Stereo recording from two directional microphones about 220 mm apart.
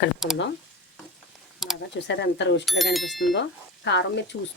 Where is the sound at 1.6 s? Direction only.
Centre (ahead or behind).